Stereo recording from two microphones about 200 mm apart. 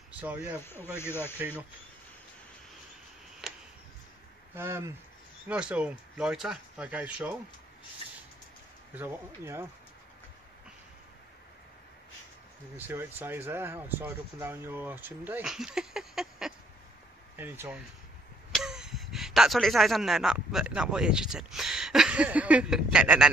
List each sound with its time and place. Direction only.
0.9 s speech: 10° left (ahead or behind)
4.6 s speech: 10° right (ahead or behind)
8.9 s speech: 10° right (ahead or behind)
12.7 s speech: 10° right (ahead or behind)